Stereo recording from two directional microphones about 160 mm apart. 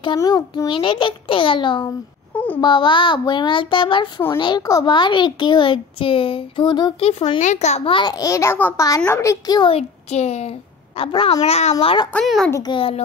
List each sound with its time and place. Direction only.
0.2 s a child's voice: 20° left (ahead or behind)
2.3 s a sound: 10° left (ahead or behind)
2.6 s a child's voice: 30° left (ahead or behind)
7.1 s a child's voice: 40° left (ahead or behind)
7.9 s a child's voice: 25° left (ahead or behind)
12.1 s a child's voice: 5° left (ahead or behind)
12.4 s a child's voice: 20° left (ahead or behind)
12.7 s a child's voice: 35° left (ahead or behind)